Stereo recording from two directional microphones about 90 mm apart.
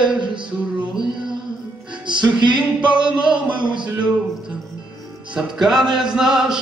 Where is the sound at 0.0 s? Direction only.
60° right (ahead or behind).